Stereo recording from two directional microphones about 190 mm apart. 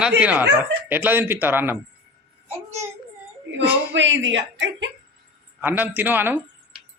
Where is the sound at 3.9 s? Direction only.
75° right (ahead or behind).